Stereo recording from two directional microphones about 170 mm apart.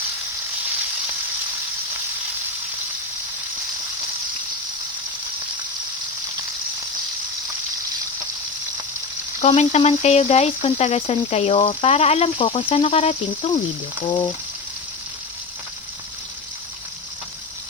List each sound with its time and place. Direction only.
9.4 s speech: 40° left (ahead or behind)
14.1 s frying: 20° left (ahead or behind)